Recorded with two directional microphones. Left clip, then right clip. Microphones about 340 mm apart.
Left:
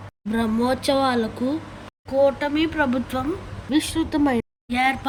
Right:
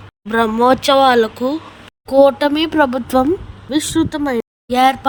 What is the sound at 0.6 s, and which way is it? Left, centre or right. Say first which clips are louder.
Speech: right 10 dB; centre.